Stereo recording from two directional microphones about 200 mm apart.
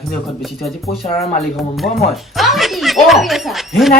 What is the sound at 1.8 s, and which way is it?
Speech, centre (ahead or behind).